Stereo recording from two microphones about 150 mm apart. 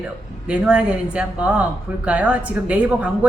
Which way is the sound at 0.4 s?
5° right (ahead or behind).